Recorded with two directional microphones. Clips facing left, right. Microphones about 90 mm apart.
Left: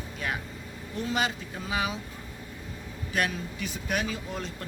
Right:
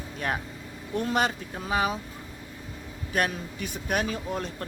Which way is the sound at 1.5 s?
40° right (ahead or behind).